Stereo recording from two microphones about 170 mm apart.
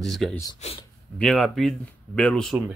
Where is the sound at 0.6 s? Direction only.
35° left (ahead or behind).